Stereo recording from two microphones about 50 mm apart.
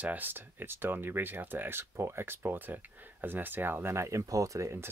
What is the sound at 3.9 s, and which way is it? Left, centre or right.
Speech, right.